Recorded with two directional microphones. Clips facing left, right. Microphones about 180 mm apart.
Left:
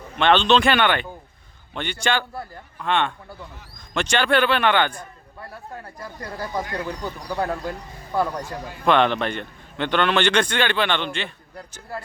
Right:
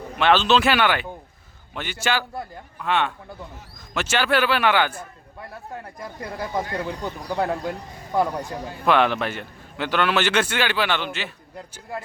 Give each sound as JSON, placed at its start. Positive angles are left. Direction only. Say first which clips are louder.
{"t": 0.2, "sound": "a man's voice", "louder": "left 1 dB", "side_deg": -5}
{"t": 6.0, "sound": "speech", "louder": "right 1 dB", "side_deg": -15}
{"t": 8.8, "sound": "a man's voice", "louder": "left 1 dB", "side_deg": -5}